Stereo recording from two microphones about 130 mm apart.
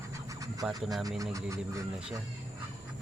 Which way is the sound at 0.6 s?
30° right (ahead or behind).